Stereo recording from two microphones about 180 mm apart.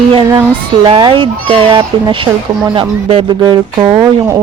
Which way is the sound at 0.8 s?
30° right (ahead or behind).